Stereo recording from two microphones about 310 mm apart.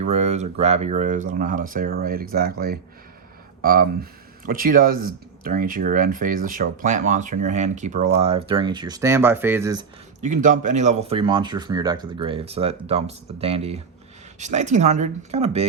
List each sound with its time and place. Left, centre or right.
0.0 s speech: right
10.2 s speech: right